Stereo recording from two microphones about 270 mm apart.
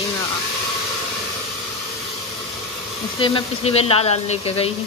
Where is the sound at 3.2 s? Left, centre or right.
Left.